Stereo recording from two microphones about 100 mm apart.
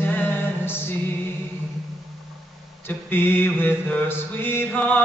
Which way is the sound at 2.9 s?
20° left (ahead or behind).